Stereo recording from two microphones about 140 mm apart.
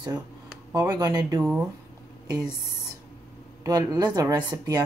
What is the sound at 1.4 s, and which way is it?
Speech, 10° right (ahead or behind).